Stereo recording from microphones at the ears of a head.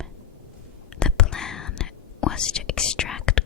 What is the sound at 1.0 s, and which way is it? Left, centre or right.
Whispering, left.